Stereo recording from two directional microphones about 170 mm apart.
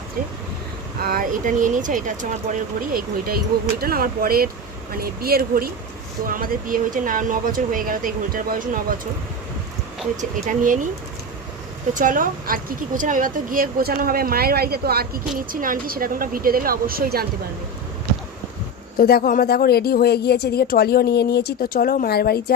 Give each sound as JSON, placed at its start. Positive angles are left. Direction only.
{"t": 1.0, "sound": "speech", "side_deg": -60}
{"t": 10.2, "sound": "speech", "side_deg": -50}
{"t": 11.9, "sound": "speech", "side_deg": -50}
{"t": 18.9, "sound": "speech", "side_deg": 60}